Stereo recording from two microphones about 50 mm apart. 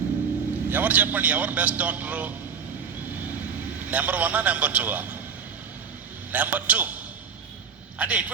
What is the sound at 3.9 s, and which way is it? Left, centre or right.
A man's voice, right.